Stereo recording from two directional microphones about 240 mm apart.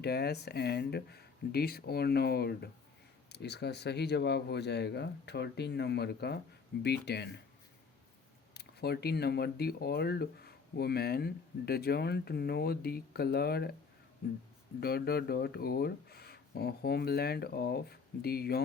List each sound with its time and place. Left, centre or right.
0.0 s speech: left
8.5 s speech: left